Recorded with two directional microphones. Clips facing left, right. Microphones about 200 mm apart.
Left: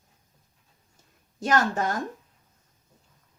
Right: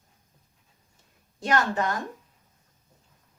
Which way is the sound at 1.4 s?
45° left (ahead or behind).